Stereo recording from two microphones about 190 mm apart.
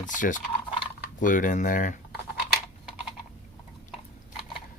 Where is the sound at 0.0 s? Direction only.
40° left (ahead or behind).